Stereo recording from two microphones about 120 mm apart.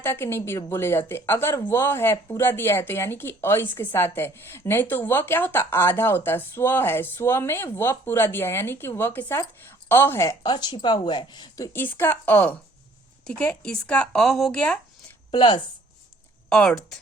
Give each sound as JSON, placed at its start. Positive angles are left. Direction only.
{"t": 0.0, "sound": "a woman's voice", "side_deg": 20}
{"t": 10.5, "sound": "speech", "side_deg": 35}
{"t": 11.7, "sound": "speech", "side_deg": 20}
{"t": 15.3, "sound": "speech", "side_deg": 40}
{"t": 16.5, "sound": "speech", "side_deg": 5}